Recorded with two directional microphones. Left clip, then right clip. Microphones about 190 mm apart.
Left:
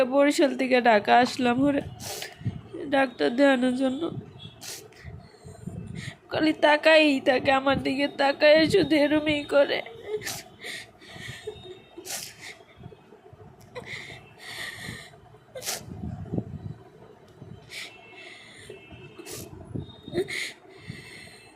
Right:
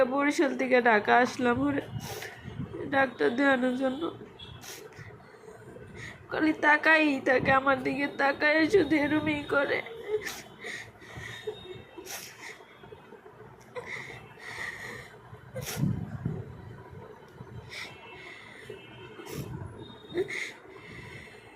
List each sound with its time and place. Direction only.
0.0 s speech: 35° left (ahead or behind)
6.0 s a woman's voice: 40° left (ahead or behind)
12.0 s a sound: 45° left (ahead or behind)
13.7 s snort: 40° left (ahead or behind)
15.5 s vehicle: 50° left (ahead or behind)
17.7 s a sound: 30° left (ahead or behind)
20.1 s snort: 40° left (ahead or behind)